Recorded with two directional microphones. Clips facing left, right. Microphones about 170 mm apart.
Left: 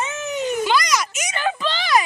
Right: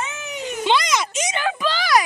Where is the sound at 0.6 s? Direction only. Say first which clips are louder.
Right 4 dB; 25° right (ahead or behind).